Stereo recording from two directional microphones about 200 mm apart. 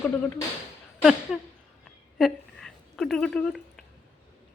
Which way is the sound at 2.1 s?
Centre (ahead or behind).